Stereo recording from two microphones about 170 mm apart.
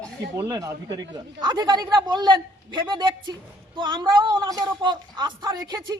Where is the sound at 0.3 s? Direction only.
20° right (ahead or behind).